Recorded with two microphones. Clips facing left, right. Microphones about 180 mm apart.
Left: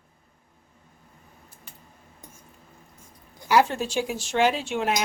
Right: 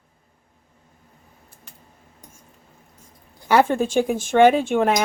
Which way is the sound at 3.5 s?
55° right (ahead or behind).